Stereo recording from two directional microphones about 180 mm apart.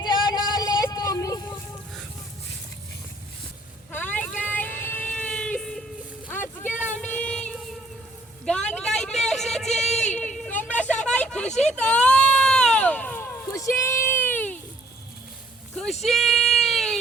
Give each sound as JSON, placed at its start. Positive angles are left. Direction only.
{"t": 0.0, "sound": "vehicle", "side_deg": 25}
{"t": 3.9, "sound": "vehicle", "side_deg": 10}
{"t": 6.6, "sound": "child singing", "side_deg": 10}
{"t": 8.7, "sound": "a sound", "side_deg": 5}
{"t": 15.7, "sound": "a sound", "side_deg": 0}
{"t": 16.0, "sound": "child singing", "side_deg": 0}